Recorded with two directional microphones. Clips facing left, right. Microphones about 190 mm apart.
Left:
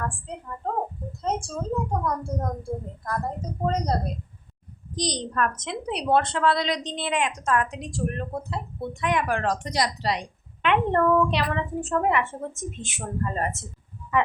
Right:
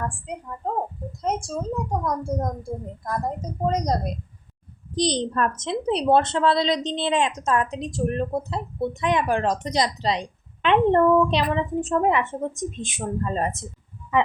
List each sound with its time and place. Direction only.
0.0 s a woman's voice: 15° right (ahead or behind)
3.7 s a child's voice: 15° right (ahead or behind)
4.9 s a woman's voice: 25° right (ahead or behind)